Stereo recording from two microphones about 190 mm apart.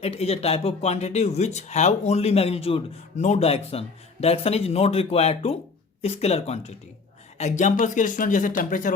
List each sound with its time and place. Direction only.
0.0 s speech: 30° left (ahead or behind)